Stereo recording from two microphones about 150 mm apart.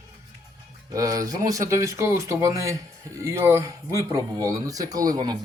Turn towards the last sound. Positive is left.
turn(degrees=-25)  # may be behind; listen again after turning